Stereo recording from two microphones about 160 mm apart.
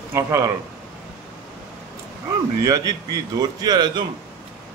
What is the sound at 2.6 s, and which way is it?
A man's voice, 25° right (ahead or behind).